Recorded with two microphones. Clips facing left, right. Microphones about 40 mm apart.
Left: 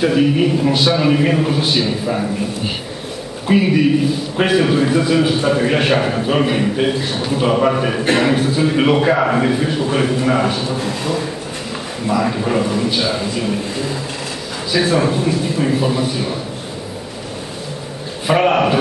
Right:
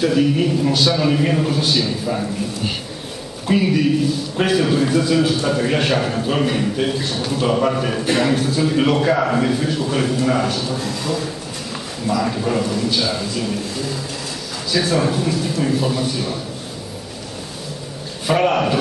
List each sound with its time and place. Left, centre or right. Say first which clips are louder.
0.0 s a man's voice: left 2 dB; centre
18.2 s a man's voice: left 3 dB; centre